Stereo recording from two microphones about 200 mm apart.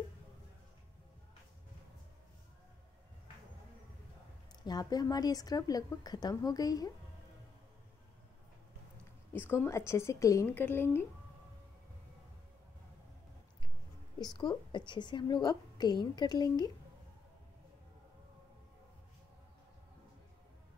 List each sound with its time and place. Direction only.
4.6 s a woman's voice: 20° left (ahead or behind)
9.3 s a woman's voice: 10° left (ahead or behind)
14.2 s a woman's voice: 20° left (ahead or behind)